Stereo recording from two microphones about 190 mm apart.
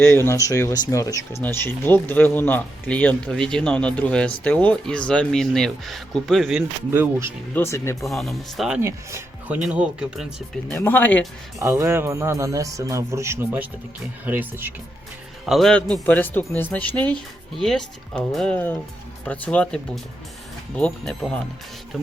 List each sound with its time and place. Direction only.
0.0 s speech: 10° left (ahead or behind)
6.9 s speech: 15° right (ahead or behind)
7.5 s speech: 15° left (ahead or behind)
8.0 s speech: centre (ahead or behind)
10.7 s speech: 10° left (ahead or behind)
11.6 s speech: 15° right (ahead or behind)
15.4 s speech: centre (ahead or behind)